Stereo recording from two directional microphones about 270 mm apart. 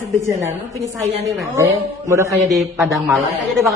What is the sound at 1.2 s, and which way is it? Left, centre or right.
A man's voice, centre.